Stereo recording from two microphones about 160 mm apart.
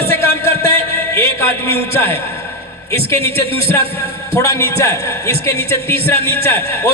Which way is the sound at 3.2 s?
35° right (ahead or behind).